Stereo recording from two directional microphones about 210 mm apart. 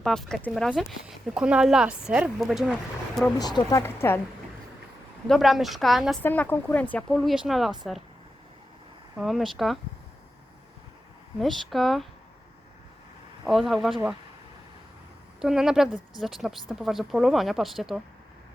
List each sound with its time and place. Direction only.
0.0 s speech: 5° left (ahead or behind)
3.3 s speech: 20° left (ahead or behind)
5.3 s speech: centre (ahead or behind)
9.1 s speech: centre (ahead or behind)
11.3 s speech: centre (ahead or behind)
13.5 s speech: centre (ahead or behind)
15.4 s speech: centre (ahead or behind)